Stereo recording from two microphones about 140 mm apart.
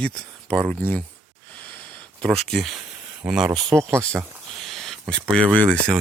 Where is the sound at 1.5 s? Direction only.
10° left (ahead or behind).